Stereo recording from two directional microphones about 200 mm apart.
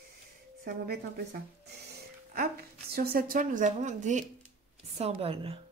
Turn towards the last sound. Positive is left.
turn(degrees=-30)  # may be behind; listen again after turning